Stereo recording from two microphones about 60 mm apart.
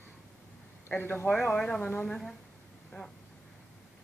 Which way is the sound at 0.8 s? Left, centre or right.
Left.